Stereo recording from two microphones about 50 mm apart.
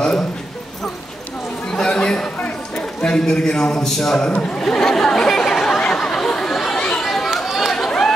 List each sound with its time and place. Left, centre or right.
1.7 s a sound: centre
2.7 s a man's voice: centre
4.3 s speech: left
5.8 s chatter: centre
6.8 s chatter: centre
7.3 s chatter: centre
7.7 s chatter: centre